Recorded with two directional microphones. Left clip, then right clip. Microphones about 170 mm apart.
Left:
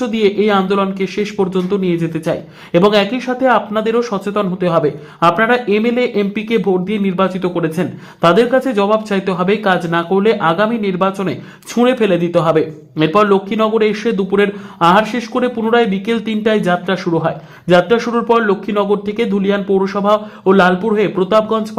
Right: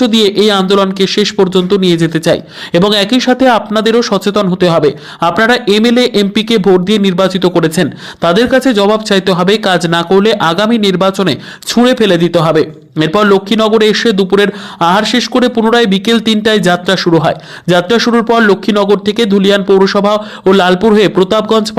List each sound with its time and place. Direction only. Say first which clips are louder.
0.0 s speech: right 5 dB; 35° right (ahead or behind)